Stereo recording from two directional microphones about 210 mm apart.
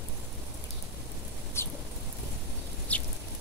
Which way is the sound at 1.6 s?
10° left (ahead or behind).